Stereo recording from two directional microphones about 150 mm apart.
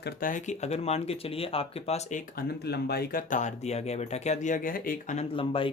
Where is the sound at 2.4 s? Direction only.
90° left; by 5.2 s 70° left (ahead or behind).